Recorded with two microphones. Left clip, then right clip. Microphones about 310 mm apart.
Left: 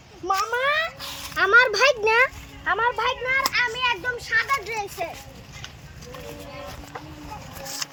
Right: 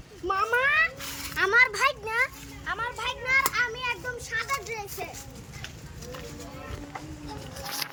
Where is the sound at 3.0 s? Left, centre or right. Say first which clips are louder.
Left 2 dB; centre.